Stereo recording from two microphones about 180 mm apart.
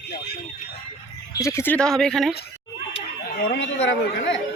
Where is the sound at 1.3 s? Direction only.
15° left (ahead or behind).